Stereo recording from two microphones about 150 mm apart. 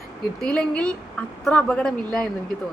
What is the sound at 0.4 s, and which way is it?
A woman's voice, 10° left (ahead or behind).